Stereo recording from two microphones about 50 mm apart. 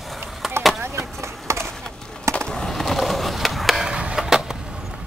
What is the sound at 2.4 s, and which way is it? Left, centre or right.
Skateboard, centre.